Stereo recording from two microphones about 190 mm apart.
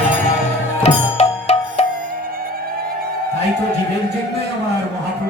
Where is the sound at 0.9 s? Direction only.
35° left (ahead or behind).